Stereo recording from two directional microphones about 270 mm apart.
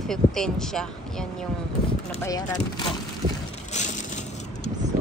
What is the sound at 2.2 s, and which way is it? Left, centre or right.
Speech, centre.